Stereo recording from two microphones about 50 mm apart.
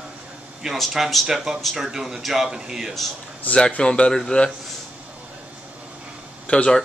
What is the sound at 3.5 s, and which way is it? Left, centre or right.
Speech, centre.